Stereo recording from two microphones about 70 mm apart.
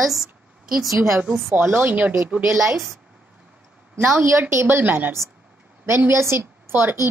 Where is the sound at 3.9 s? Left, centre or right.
Right.